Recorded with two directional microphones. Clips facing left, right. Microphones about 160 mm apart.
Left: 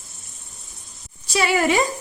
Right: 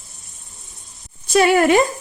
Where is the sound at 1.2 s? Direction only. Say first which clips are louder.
Right 6 dB; 50° right (ahead or behind).